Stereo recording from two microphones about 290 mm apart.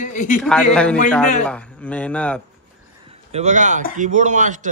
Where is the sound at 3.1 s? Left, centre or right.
Right.